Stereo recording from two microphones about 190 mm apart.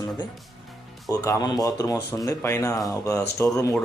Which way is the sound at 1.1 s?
15° left (ahead or behind).